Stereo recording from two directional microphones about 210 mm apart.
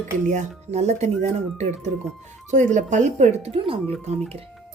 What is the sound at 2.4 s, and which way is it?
Speech, 35° right (ahead or behind).